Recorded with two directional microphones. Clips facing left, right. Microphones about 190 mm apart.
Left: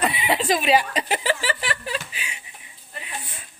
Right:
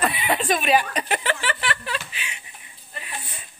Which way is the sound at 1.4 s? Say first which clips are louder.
Even; 35° left (ahead or behind).